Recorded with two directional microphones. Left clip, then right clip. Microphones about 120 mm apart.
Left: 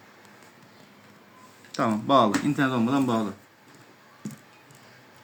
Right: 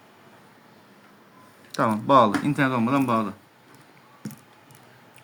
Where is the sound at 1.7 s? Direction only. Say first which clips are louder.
Right 3 dB; 70° right (ahead or behind); by 2.9 s 55° right (ahead or behind).